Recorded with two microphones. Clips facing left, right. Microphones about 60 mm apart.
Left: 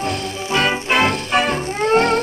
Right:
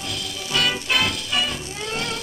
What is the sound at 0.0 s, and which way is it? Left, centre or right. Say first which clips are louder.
Music: left 8 dB; left.